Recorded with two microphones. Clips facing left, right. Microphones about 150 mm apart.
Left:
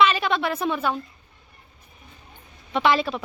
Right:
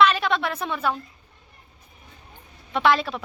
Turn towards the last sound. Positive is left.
turn(degrees=0)  # may be behind; listen again after turning